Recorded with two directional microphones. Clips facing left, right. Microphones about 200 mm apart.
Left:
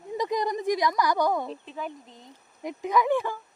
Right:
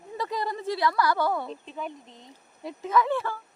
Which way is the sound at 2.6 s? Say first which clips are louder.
Even; 15° left (ahead or behind).